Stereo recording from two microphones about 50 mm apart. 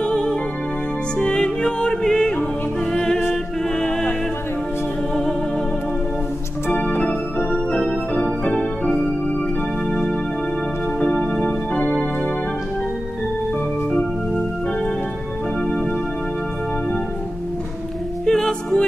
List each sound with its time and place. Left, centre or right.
0.0 s music: centre
6.7 s organ: left
9.8 s music: centre
11.8 s keyboard: left
18.2 s music: centre